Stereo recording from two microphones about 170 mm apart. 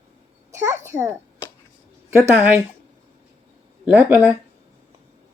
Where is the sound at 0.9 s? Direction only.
15° right (ahead or behind).